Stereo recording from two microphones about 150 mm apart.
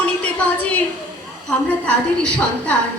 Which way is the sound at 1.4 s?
10° left (ahead or behind).